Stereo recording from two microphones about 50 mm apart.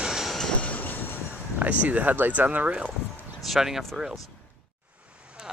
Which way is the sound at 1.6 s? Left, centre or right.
Right.